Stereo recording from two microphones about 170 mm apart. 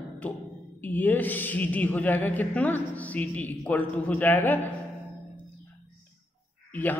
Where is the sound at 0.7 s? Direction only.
10° left (ahead or behind).